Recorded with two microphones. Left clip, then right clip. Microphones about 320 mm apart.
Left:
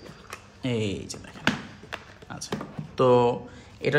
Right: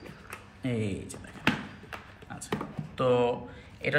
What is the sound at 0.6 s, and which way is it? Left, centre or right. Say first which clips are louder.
Speech: left 5 dB; centre.